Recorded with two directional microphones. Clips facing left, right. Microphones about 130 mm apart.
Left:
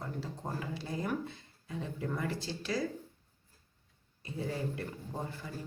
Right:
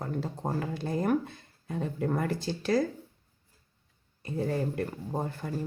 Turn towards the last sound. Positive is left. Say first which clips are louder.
# right 7 dB
turn(degrees=-50)  # may be behind; listen again after turning